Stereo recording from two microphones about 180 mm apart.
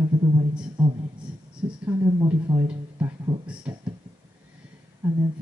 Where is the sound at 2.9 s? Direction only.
20° right (ahead or behind).